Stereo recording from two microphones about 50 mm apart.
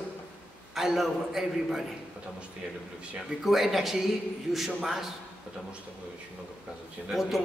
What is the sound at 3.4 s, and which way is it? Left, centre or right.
A man's voice, centre.